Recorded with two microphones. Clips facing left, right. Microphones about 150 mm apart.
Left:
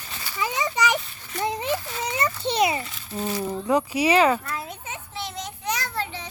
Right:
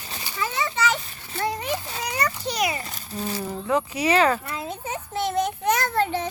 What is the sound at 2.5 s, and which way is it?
Speech, 25° left (ahead or behind).